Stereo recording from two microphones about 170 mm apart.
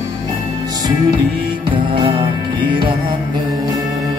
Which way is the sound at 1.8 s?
30° right (ahead or behind).